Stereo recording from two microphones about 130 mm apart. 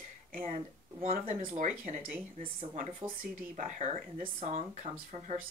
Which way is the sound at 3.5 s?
75° right (ahead or behind).